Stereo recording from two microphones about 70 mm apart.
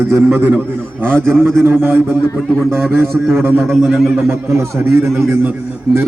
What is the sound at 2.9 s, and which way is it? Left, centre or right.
Speech, centre.